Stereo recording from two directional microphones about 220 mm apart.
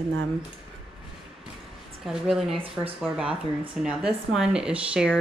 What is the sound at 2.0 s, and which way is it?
Speech, centre (ahead or behind).